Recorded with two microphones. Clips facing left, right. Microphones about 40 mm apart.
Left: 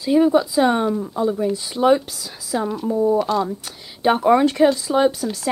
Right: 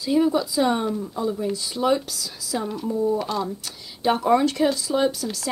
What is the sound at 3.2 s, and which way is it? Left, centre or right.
Speech, centre.